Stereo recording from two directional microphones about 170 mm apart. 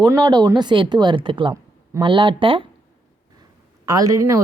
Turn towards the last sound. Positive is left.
turn(degrees=-20)  # may be behind; listen again after turning